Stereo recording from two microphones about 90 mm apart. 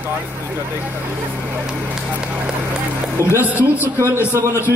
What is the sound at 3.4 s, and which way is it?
Speech, 20° right (ahead or behind).